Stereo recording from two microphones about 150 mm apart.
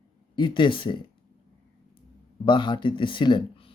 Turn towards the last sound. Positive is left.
turn(degrees=35)  # may be behind; listen again after turning